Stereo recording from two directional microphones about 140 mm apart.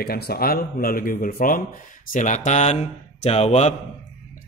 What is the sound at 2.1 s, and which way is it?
Speech, 60° left (ahead or behind).